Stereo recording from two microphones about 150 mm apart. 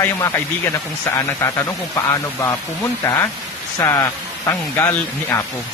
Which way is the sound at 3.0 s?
20° left (ahead or behind).